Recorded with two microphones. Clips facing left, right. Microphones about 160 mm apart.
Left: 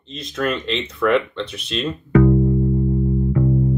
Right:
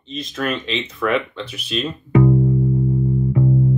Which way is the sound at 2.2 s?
20° right (ahead or behind).